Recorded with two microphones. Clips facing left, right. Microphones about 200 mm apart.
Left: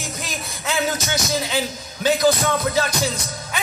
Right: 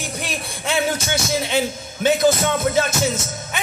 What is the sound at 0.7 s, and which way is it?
Music, 30° right (ahead or behind).